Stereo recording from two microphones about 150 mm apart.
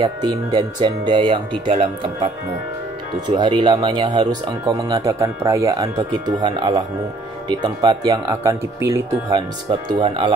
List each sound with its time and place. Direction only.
0.0 s speech: 30° right (ahead or behind)
9.3 s speech: 35° right (ahead or behind)